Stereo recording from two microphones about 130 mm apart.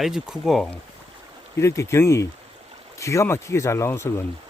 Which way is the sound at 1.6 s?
20° left (ahead or behind).